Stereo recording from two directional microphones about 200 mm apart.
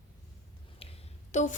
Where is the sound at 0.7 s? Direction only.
30° left (ahead or behind).